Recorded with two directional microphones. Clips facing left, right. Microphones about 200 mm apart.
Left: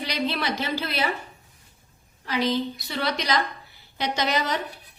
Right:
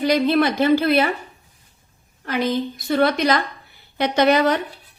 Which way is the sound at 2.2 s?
50° right (ahead or behind).